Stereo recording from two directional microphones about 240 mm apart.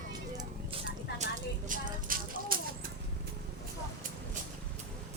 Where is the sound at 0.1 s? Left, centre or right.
Centre.